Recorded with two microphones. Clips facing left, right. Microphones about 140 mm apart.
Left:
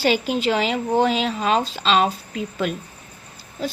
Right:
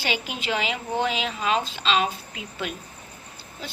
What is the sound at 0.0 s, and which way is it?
A woman's voice, 35° left (ahead or behind).